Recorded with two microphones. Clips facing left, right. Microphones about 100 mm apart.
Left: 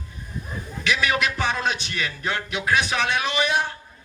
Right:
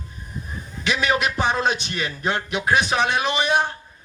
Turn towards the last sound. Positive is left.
turn(degrees=-25)  # may be behind; listen again after turning